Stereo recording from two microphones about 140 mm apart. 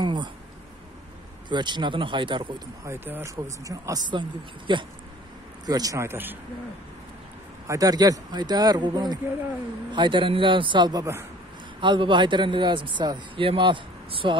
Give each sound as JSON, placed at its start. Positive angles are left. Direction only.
{"t": 0.0, "sound": "a sound", "side_deg": -30}
{"t": 1.5, "sound": "speech", "side_deg": -35}
{"t": 2.8, "sound": "speech", "side_deg": -15}
{"t": 7.6, "sound": "speech", "side_deg": -25}
{"t": 11.8, "sound": "speech", "side_deg": -35}